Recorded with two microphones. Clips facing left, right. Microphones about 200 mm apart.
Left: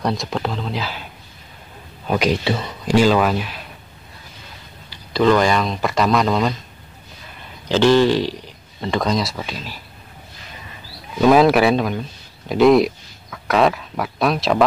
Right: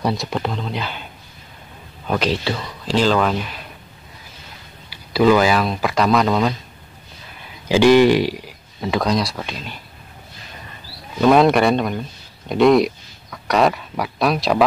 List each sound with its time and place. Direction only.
0.0 s speech: centre (ahead or behind)
2.0 s speech: 10° left (ahead or behind)
2.4 s speech: 20° left (ahead or behind)
3.0 s speech: 10° left (ahead or behind)
4.8 s speech: 10° right (ahead or behind)
7.6 s speech: 10° right (ahead or behind)
11.1 s speech: centre (ahead or behind)